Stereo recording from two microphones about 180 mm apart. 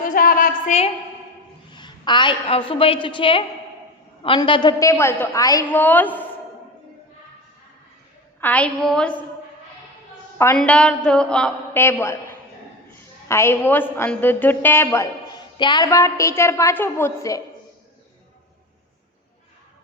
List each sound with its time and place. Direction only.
0.0 s a sound: 50° left (ahead or behind)
1.7 s a woman's voice: 25° left (ahead or behind); by 6.2 s 10° left (ahead or behind)
8.4 s a woman's voice: 10° left (ahead or behind)
10.3 s a woman's voice: 15° left (ahead or behind)